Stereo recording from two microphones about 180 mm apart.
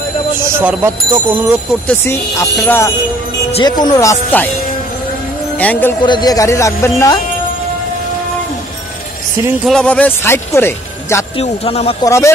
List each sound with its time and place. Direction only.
0.4 s speech: 15° right (ahead or behind)
1.9 s speech: 15° left (ahead or behind)
5.6 s speech: 10° left (ahead or behind)
6.0 s speech: 25° left (ahead or behind)
9.7 s speech: 5° left (ahead or behind)
11.3 s a man's voice: 35° left (ahead or behind)
12.0 s speech: 15° left (ahead or behind)